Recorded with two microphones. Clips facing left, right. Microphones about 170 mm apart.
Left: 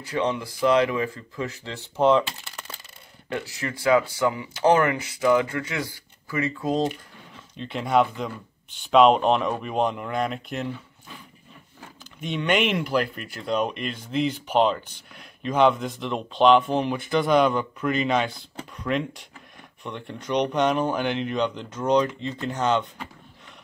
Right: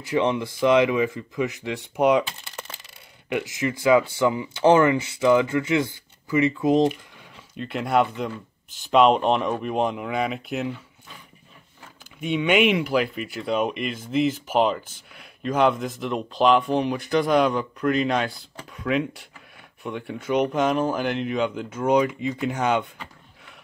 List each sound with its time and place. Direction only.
0.0 s speech: 20° right (ahead or behind)
3.3 s speech: 20° right (ahead or behind)
7.5 s speech: 5° right (ahead or behind)
12.2 s speech: 5° right (ahead or behind)